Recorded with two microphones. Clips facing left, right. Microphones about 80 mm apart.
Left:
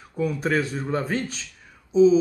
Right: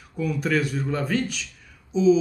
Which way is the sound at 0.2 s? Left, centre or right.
Left.